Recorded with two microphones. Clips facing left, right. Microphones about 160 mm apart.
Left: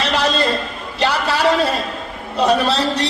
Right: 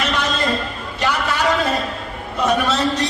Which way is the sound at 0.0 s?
35° left (ahead or behind).